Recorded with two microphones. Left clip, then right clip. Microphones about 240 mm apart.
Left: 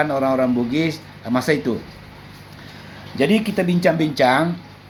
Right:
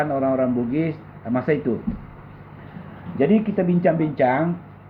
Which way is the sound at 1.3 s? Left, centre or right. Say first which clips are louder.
Left 3 dB; left.